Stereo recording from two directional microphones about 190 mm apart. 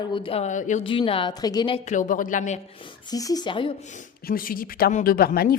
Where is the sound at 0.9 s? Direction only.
30° left (ahead or behind).